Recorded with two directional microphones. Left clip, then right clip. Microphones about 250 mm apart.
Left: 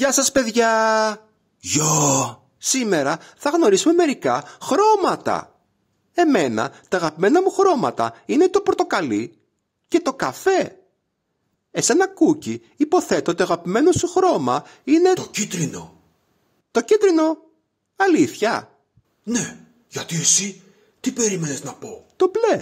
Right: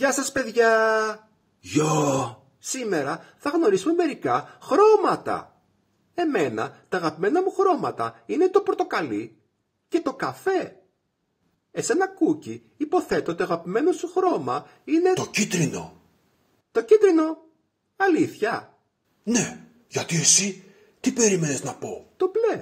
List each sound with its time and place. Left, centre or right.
0.0 s speech: left
11.7 s speech: left
16.7 s speech: left
19.2 s hiccup: centre
21.1 s speech: centre
22.1 s speech: left